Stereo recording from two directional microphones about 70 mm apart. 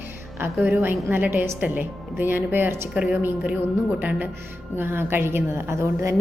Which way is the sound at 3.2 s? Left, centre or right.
Centre.